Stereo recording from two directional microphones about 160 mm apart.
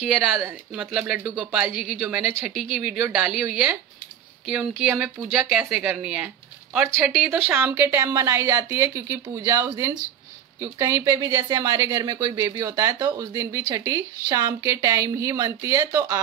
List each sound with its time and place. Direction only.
0.0 s speech: 5° right (ahead or behind); by 16.2 s 20° right (ahead or behind)